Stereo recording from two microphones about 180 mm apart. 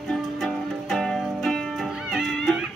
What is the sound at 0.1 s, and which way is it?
Music, centre (ahead or behind).